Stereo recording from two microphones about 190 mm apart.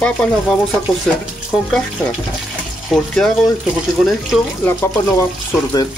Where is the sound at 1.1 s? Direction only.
Centre (ahead or behind).